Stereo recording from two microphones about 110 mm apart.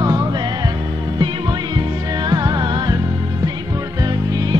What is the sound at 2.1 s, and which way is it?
Music, 40° right (ahead or behind).